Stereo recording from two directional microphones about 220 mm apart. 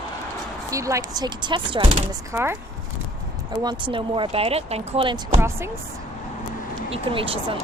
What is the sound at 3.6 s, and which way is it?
Speech, 20° right (ahead or behind).